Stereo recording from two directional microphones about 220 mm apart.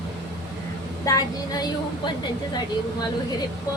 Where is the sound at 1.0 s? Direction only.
15° left (ahead or behind).